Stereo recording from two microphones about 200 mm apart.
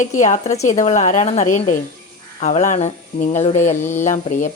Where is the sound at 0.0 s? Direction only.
35° left (ahead or behind).